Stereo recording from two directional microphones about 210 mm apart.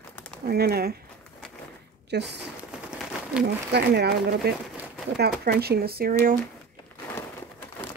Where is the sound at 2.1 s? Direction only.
50° right (ahead or behind).